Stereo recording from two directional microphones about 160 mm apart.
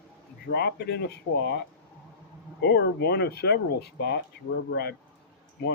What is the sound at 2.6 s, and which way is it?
Speech, 85° left.